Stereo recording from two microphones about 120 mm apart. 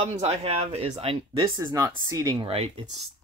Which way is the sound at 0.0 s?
65° right (ahead or behind).